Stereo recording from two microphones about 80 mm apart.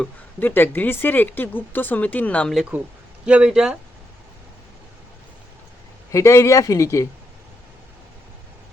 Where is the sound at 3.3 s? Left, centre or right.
Centre.